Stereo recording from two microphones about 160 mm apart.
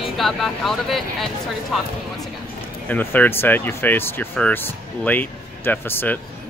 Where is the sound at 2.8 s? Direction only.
10° left (ahead or behind).